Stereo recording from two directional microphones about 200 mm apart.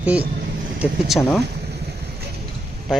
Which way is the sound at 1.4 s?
55° right (ahead or behind).